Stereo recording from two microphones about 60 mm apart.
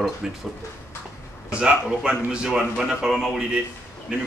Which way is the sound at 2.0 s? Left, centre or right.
Centre.